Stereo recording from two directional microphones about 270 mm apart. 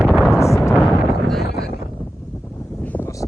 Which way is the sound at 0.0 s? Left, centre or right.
Centre.